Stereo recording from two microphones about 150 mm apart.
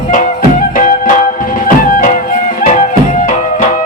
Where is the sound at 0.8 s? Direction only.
60° left (ahead or behind).